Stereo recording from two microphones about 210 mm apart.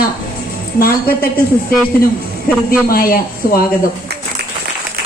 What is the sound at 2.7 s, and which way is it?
Speech, 45° left (ahead or behind).